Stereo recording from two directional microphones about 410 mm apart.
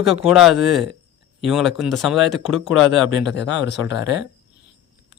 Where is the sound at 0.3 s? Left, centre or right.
Centre.